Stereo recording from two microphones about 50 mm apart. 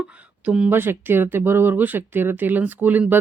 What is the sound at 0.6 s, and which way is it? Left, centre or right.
Speech, right.